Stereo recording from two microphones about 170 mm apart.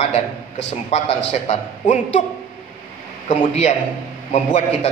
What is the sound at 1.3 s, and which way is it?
Speech, 45° left (ahead or behind).